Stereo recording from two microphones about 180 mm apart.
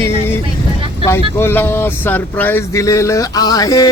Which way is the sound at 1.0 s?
15° left (ahead or behind).